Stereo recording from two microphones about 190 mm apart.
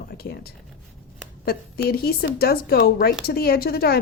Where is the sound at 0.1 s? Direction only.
55° left (ahead or behind).